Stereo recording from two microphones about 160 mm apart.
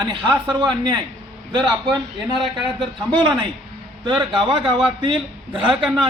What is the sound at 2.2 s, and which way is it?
Speech, 5° right (ahead or behind).